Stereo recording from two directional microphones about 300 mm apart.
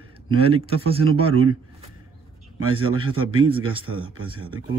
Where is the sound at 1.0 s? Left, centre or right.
Right.